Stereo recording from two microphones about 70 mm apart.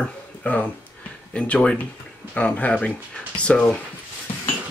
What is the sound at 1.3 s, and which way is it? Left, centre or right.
Speech, centre.